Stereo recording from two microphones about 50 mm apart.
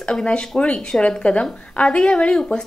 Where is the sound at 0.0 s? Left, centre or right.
Centre.